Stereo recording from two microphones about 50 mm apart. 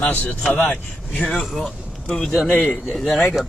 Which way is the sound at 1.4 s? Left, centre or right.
Centre.